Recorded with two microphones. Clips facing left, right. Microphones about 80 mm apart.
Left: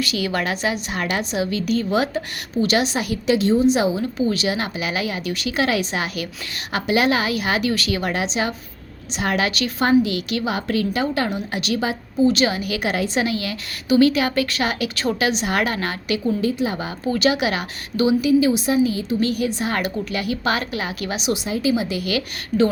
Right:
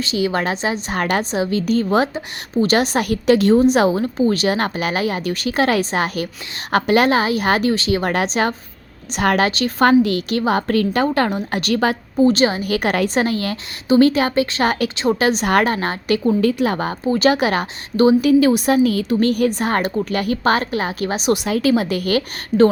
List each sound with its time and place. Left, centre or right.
0.0 s a woman's voice: right
0.9 s a woman's voice: right
8.0 s a woman's voice: right
9.5 s a woman's voice: right
9.8 s a woman's voice: right
12.3 s a woman's voice: right
14.6 s a woman's voice: right
16.4 s a woman's voice: right
17.1 s a woman's voice: right
18.3 s a woman's voice: right
21.3 s a woman's voice: right